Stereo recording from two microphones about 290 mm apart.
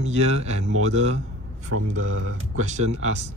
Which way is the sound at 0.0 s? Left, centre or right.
Right.